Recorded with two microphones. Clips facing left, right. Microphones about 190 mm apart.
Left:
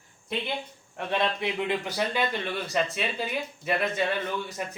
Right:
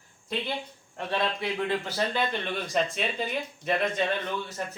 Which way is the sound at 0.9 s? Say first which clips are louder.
Left 1 dB; 15° left (ahead or behind).